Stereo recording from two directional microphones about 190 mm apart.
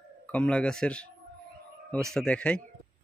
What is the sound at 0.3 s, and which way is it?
Speech, 5° left (ahead or behind).